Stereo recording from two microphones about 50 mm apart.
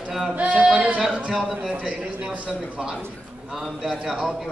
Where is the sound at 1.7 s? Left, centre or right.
Right.